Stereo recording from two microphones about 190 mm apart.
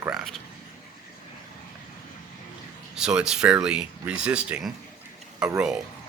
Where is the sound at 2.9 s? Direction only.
5° right (ahead or behind).